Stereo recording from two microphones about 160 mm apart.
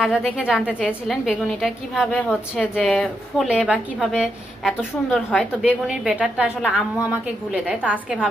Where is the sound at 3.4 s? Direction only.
5° right (ahead or behind).